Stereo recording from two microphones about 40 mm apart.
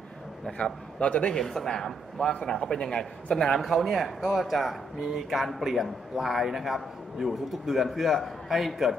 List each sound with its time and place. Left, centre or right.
0.5 s a man's voice: left
1.3 s a man's voice: centre